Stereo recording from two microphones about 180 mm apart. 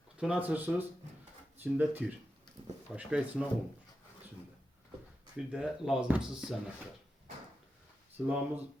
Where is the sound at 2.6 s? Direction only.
25° right (ahead or behind).